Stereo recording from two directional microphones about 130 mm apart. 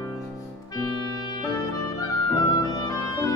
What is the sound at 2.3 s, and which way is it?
Clarinet, 30° left (ahead or behind).